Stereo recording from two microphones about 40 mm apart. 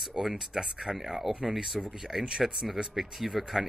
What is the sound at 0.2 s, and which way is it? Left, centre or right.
Speech, centre.